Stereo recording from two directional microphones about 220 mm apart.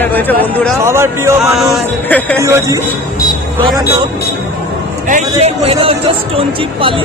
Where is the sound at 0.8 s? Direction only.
10° right (ahead or behind).